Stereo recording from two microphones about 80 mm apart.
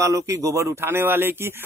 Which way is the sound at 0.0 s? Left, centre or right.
Right.